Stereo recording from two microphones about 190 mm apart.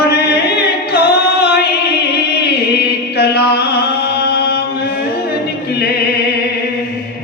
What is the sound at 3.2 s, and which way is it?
Music, 60° left (ahead or behind).